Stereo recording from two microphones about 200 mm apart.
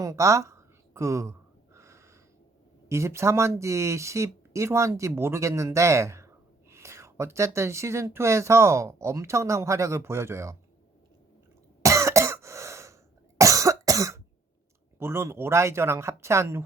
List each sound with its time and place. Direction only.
0.0 s a sound: 15° right (ahead or behind)
2.9 s speech: 15° right (ahead or behind)
11.8 s cough: 15° right (ahead or behind)
14.9 s speech: 10° right (ahead or behind)